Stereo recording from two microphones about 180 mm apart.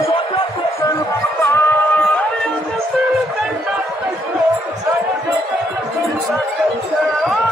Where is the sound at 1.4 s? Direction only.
10° left (ahead or behind).